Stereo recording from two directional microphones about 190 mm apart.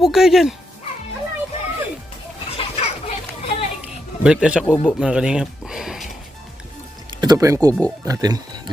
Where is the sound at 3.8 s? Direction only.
5° right (ahead or behind).